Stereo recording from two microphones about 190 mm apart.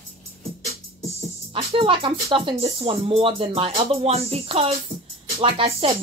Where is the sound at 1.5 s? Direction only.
25° right (ahead or behind).